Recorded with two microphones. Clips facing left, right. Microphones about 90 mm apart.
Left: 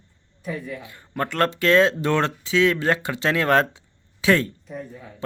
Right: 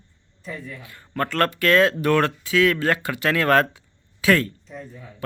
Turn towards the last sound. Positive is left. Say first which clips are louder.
# left 3 dB
turn(degrees=15)  # may be behind; listen again after turning